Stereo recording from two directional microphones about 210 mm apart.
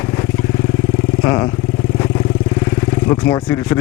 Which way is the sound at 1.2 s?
15° left (ahead or behind).